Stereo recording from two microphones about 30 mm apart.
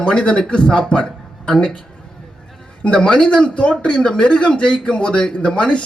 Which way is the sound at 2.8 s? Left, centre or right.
Left.